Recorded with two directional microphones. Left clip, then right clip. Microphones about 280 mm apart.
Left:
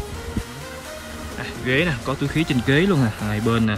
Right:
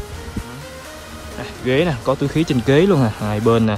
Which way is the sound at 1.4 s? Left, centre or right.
Centre.